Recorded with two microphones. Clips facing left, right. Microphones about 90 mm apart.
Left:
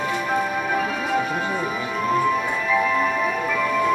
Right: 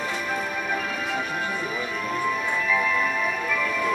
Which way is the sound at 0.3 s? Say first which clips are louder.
Left 6 dB; 25° left (ahead or behind).